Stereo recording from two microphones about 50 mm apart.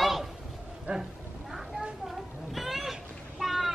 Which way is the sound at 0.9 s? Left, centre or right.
Right.